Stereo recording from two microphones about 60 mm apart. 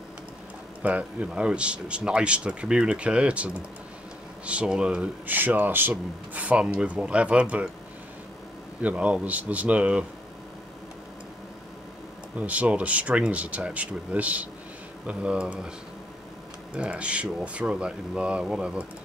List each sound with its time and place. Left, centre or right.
0.8 s a man's voice: right
5.2 s a man's voice: right
8.8 s a man's voice: right
12.4 s a man's voice: right
16.7 s speech: centre